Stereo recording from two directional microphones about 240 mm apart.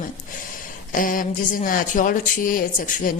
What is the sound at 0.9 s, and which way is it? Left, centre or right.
Speech, left.